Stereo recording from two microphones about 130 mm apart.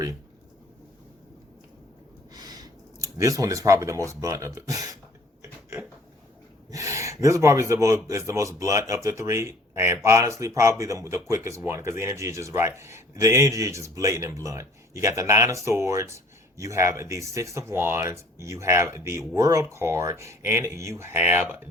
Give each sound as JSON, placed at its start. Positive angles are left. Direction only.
{"t": 2.3, "sound": "a sound", "side_deg": -30}
{"t": 3.2, "sound": "speech", "side_deg": -25}
{"t": 6.7, "sound": "a man's voice", "side_deg": -25}